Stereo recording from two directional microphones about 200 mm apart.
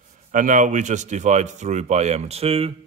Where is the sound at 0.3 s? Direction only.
40° right (ahead or behind).